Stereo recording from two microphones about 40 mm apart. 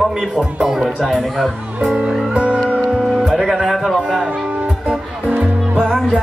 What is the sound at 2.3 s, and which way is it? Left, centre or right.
Music, right.